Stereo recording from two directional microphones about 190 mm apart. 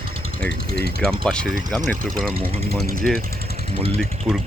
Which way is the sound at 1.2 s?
5° left (ahead or behind).